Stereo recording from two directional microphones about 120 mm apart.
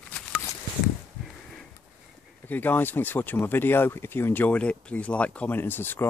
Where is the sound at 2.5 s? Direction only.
15° left (ahead or behind).